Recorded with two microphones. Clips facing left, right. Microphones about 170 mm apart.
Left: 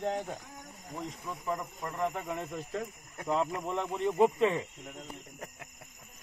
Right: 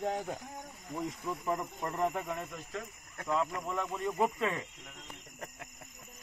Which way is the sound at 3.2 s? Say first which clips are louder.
Left 2 dB; 20° left (ahead or behind).